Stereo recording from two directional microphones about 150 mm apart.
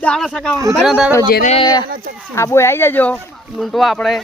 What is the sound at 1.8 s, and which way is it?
Speech, 80° right.